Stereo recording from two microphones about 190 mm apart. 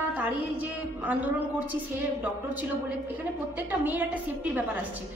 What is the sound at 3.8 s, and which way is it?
Speech, 10° right (ahead or behind).